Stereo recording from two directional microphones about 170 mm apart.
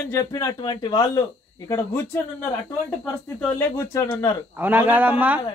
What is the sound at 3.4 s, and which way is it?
Speech, 15° left (ahead or behind).